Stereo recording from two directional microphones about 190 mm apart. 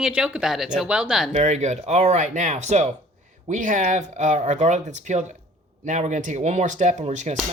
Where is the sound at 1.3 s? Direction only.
35° right (ahead or behind).